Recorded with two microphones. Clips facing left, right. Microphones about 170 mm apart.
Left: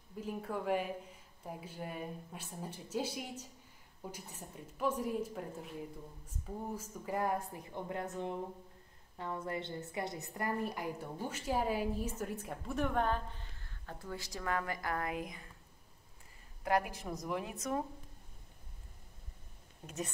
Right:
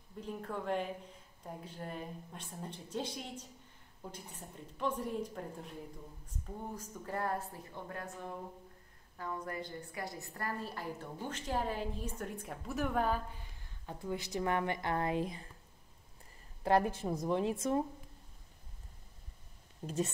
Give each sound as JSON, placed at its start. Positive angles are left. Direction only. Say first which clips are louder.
{"t": 0.2, "sound": "a woman's voice", "louder": "left 2 dB", "side_deg": 5}
{"t": 16.6, "sound": "a woman's voice", "louder": "right 4 dB", "side_deg": -30}